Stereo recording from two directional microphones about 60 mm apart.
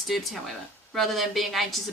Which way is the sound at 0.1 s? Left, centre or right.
Centre.